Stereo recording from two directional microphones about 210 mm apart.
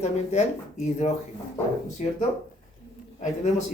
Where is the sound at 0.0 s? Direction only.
35° left (ahead or behind).